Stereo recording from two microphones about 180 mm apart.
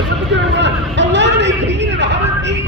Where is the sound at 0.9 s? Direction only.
75° right (ahead or behind).